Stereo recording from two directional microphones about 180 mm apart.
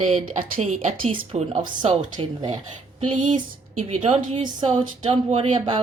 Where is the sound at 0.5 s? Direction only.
40° right (ahead or behind).